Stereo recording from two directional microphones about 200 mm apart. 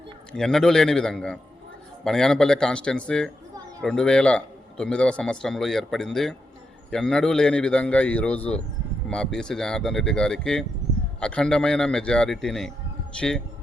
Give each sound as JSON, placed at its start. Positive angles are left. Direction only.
{"t": 0.3, "sound": "a man's voice", "side_deg": 0}